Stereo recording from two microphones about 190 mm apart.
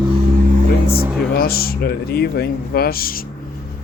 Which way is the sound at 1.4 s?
50° left (ahead or behind).